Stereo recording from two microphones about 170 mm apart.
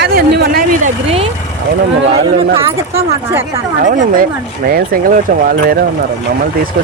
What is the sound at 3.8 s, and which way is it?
Speech, 55° right (ahead or behind).